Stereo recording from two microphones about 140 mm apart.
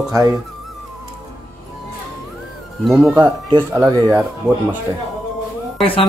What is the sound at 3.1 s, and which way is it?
Speech, 30° right (ahead or behind).